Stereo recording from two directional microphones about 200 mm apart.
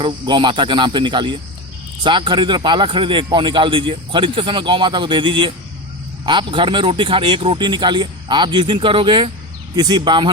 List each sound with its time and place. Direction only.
0.0 s speech: 25° right (ahead or behind)